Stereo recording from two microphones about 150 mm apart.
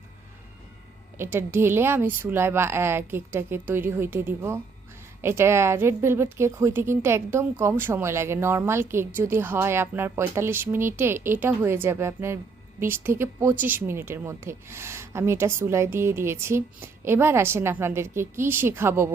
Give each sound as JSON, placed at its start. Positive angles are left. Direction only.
{"t": 1.2, "sound": "a woman's voice", "side_deg": -15}